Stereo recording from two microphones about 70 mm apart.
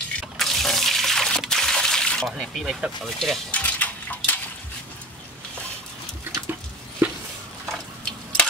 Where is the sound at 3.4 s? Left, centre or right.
Left.